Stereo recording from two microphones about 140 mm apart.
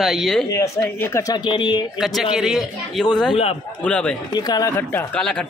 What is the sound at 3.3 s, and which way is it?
Speech, 45° left (ahead or behind).